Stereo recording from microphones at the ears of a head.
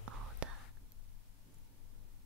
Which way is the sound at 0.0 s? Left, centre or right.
Right.